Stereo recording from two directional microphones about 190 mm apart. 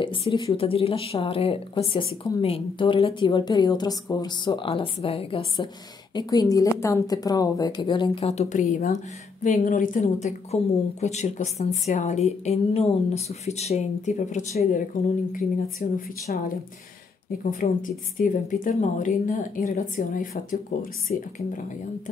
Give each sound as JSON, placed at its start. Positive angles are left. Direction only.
{"t": 0.0, "sound": "a woman's voice", "side_deg": 30}